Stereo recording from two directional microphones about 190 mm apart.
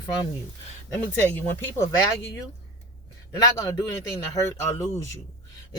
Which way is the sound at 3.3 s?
15° left (ahead or behind).